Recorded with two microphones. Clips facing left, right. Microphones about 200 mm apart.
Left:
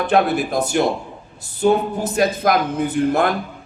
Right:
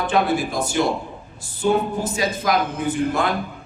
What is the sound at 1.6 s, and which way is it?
A man's voice, 55° left (ahead or behind).